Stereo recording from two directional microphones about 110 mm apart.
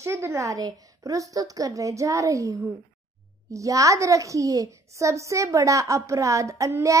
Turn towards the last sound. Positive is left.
turn(degrees=-30)  # may be behind; listen again after turning